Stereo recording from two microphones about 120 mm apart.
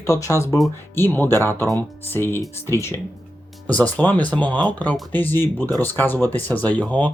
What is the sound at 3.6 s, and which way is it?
Speech, 10° left (ahead or behind).